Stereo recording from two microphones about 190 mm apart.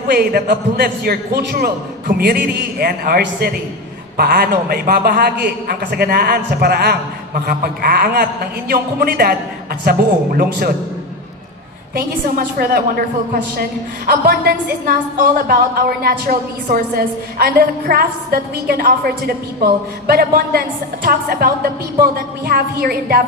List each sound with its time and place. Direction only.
0.1 s a woman's voice: 55° right (ahead or behind)
11.9 s a woman's voice: 50° right (ahead or behind)